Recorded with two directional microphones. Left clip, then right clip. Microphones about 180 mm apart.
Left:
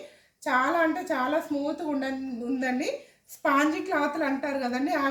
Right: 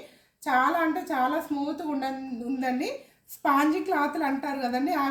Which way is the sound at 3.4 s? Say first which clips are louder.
Right 1 dB; 15° left (ahead or behind).